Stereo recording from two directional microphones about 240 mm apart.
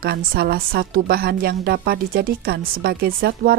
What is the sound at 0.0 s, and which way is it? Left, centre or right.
Speech, right.